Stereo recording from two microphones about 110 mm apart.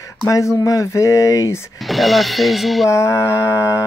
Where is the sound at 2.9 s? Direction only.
25° left (ahead or behind).